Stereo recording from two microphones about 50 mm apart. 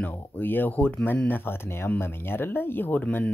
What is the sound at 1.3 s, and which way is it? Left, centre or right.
Speech, left.